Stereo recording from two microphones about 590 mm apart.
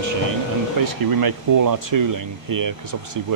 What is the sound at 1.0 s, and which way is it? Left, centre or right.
Speech, right.